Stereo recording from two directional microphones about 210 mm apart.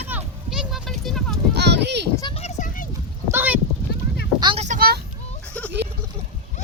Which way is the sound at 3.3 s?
10° right (ahead or behind).